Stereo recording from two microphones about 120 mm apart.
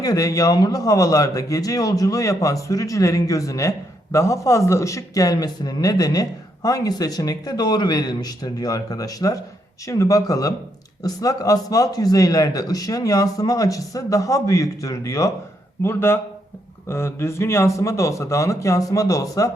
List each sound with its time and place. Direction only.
0.0 s a man's voice: 30° left (ahead or behind)